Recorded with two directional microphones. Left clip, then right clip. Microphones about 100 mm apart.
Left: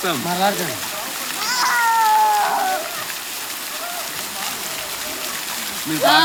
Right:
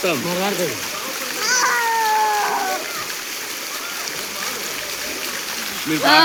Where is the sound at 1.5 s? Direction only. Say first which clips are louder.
Left 2 dB; 5° left (ahead or behind).